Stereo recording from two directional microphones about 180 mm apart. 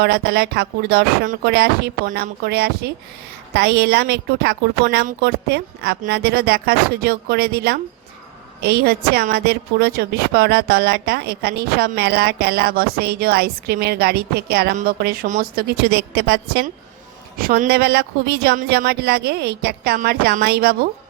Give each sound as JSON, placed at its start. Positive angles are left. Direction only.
{"t": 0.0, "sound": "a woman's voice", "side_deg": -65}
{"t": 17.3, "sound": "speech", "side_deg": -55}